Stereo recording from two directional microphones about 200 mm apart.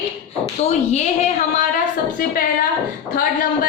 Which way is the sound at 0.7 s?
35° left (ahead or behind).